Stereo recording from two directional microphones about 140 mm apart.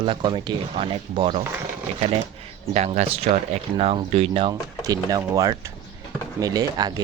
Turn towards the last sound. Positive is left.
turn(degrees=-30)  # may be behind; listen again after turning